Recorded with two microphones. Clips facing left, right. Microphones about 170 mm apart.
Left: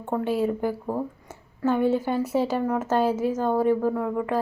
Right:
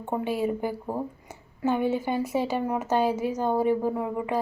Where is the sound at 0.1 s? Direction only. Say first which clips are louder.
Left 2 dB; 5° right (ahead or behind).